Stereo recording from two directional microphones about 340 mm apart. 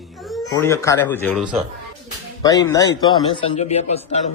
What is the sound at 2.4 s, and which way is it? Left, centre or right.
A man's voice, centre.